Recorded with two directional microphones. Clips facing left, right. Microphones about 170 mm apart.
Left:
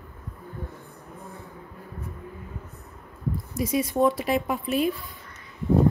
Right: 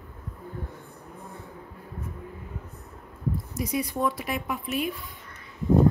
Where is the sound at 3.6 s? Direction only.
25° left (ahead or behind).